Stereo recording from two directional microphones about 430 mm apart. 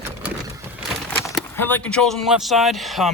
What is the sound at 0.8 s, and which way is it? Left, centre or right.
Speech, centre.